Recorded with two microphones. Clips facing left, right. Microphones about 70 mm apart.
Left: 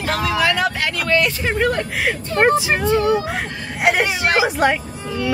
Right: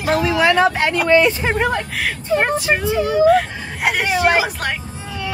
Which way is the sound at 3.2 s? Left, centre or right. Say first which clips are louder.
Right 12 dB; centre.